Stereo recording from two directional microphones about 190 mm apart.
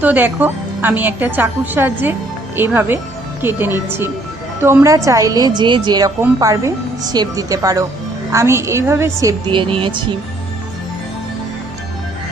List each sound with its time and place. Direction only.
0.0 s a woman's voice: 10° right (ahead or behind)
9.5 s speech: 25° right (ahead or behind)